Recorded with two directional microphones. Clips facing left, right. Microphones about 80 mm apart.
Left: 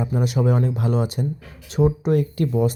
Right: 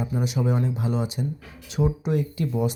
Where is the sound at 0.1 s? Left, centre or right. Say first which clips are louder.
Left 5 dB; left.